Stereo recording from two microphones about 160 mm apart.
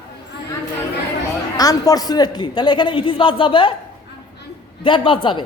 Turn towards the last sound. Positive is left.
turn(degrees=30)  # may be behind; listen again after turning